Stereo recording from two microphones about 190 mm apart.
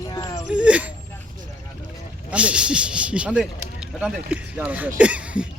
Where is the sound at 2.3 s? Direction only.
5° right (ahead or behind).